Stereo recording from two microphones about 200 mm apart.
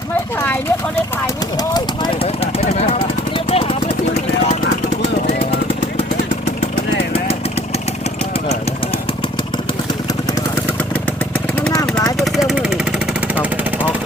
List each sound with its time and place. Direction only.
0.4 s vehicle: 10° left (ahead or behind)
2.2 s a sound: 30° left (ahead or behind)
5.2 s machine gun: 35° left (ahead or behind)
11.7 s vehicle: 20° left (ahead or behind)
12.2 s vehicle: centre (ahead or behind)